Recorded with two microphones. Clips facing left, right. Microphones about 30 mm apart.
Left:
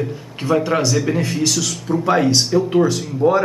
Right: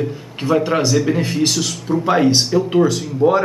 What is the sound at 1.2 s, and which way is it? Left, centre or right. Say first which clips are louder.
A man's voice: right 1 dB; centre.